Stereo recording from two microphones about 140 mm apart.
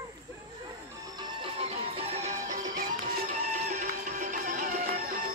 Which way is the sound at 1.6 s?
45° right (ahead or behind).